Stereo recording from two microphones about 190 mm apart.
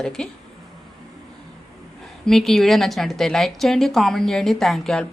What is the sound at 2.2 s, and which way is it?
A woman's voice, centre (ahead or behind).